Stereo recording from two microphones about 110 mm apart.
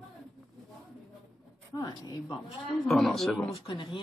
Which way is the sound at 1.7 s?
35° left (ahead or behind).